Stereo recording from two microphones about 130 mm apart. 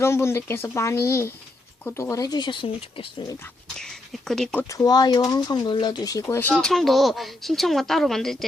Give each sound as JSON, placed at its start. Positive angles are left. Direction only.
{"t": 0.0, "sound": "speech", "side_deg": 20}
{"t": 3.8, "sound": "speech", "side_deg": 5}
{"t": 4.7, "sound": "speech", "side_deg": 30}
{"t": 6.5, "sound": "speech", "side_deg": 0}